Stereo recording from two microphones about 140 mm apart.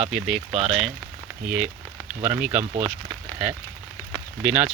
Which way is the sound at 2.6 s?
55° right (ahead or behind).